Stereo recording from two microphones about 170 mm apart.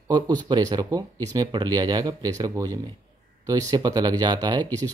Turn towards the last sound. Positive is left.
turn(degrees=-20)  # may be behind; listen again after turning